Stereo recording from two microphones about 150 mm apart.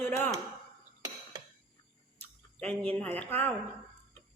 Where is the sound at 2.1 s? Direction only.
10° left (ahead or behind).